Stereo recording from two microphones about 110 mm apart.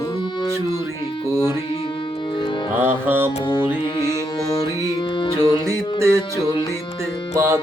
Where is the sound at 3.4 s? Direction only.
40° left (ahead or behind).